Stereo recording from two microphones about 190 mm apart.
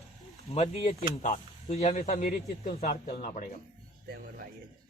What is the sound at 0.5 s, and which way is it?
Speech, 35° left (ahead or behind).